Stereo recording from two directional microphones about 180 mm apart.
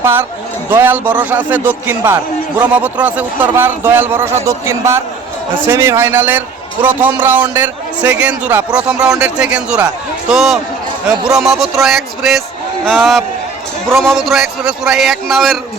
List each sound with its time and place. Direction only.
0.0 s a man's voice: 10° right (ahead or behind)